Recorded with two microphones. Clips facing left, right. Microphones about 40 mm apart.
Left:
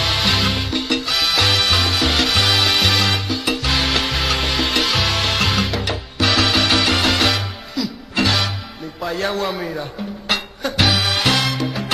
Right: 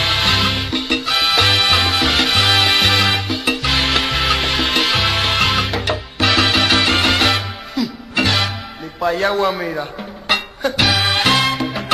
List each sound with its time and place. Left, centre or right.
0.1 s music: centre
0.7 s salsa music: right
4.3 s music: centre
9.1 s a man's voice: centre
9.7 s music: centre
11.1 s music: right